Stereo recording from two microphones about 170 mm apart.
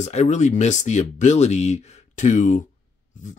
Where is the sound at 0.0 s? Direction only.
45° left (ahead or behind).